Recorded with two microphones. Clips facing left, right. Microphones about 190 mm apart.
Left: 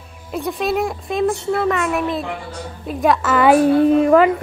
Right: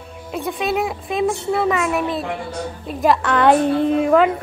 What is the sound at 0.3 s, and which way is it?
A woman's voice, centre (ahead or behind).